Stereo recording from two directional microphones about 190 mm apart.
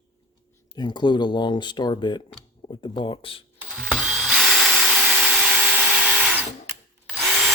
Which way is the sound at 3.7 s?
Centre (ahead or behind).